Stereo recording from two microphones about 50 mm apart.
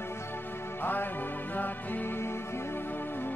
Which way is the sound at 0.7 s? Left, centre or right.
Left.